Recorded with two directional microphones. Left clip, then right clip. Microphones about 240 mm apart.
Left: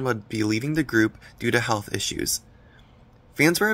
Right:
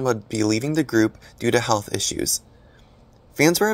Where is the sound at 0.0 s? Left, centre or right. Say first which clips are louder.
Right 4 dB; centre.